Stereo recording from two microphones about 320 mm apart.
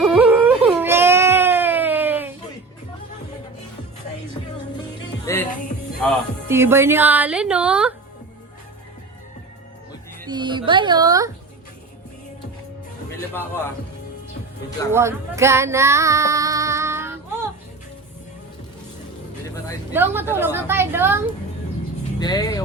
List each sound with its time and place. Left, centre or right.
0.0 s baby cry: centre
5.2 s music: centre
5.5 s music: left
6.0 s speech: centre
10.2 s speech: centre
14.9 s female singing: centre
19.9 s speech: centre
22.2 s speech: centre